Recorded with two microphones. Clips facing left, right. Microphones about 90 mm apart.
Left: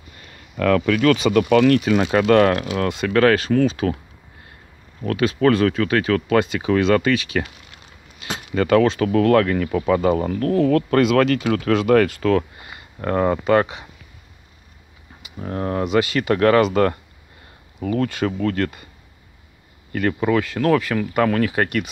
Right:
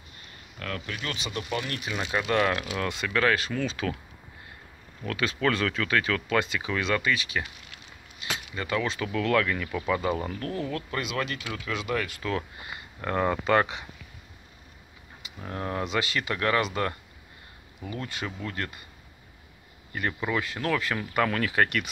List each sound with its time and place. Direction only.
0.2 s a sound: 90° left
1.1 s speech: 65° left (ahead or behind)
3.7 s speech: 35° left (ahead or behind)
5.4 s speech: 40° left (ahead or behind)
6.1 s speech: 45° left (ahead or behind)
8.3 s keys jangling: 45° left (ahead or behind)
8.5 s speech: 65° left (ahead or behind)
13.0 s speech: 35° left (ahead or behind)
15.3 s speech: 35° left (ahead or behind)
15.8 s speech: 55° left (ahead or behind)
17.9 s speech: 70° left (ahead or behind)
19.9 s speech: 60° left (ahead or behind); by 21.6 s 40° left (ahead or behind)